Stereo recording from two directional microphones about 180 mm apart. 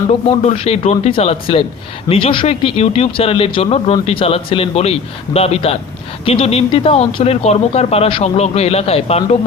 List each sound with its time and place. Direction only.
0.3 s speech: 35° left (ahead or behind)